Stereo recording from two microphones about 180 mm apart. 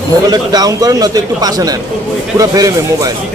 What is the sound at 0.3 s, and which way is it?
A man's voice, 20° right (ahead or behind).